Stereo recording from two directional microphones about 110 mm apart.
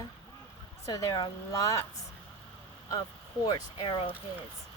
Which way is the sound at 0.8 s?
30° left (ahead or behind).